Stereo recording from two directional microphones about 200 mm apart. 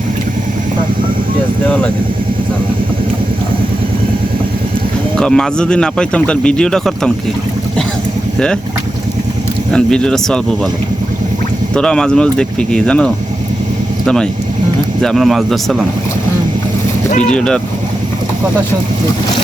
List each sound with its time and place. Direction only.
5.1 s speech: 5° left (ahead or behind)
9.7 s speech: 5° left (ahead or behind)
11.7 s speech: 5° left (ahead or behind)
15.0 s speech: centre (ahead or behind)
17.1 s speech: 35° left (ahead or behind)
17.3 s speech: 5° left (ahead or behind)